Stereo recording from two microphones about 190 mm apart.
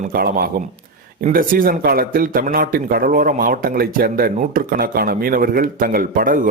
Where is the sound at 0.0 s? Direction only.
50° right (ahead or behind).